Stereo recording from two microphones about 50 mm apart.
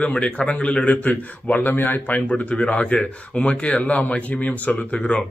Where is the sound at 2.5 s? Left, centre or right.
Left.